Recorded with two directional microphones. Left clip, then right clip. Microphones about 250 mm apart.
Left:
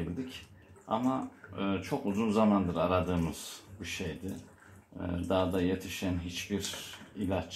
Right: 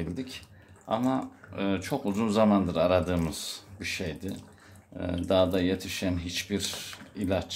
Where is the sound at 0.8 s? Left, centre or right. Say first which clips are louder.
Right 3 dB; right.